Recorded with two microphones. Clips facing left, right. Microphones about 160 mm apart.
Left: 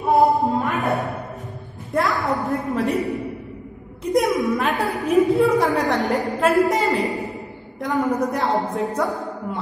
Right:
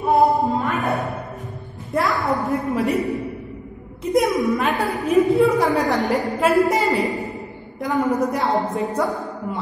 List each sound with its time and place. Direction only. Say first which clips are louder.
0.0 s music: even; centre (ahead or behind)
2.0 s a woman's voice: right 1 dB; centre (ahead or behind)
4.1 s a woman's voice: right 1 dB; centre (ahead or behind)